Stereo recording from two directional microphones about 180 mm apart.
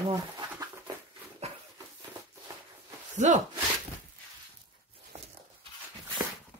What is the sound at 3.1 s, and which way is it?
Speech, 40° right (ahead or behind).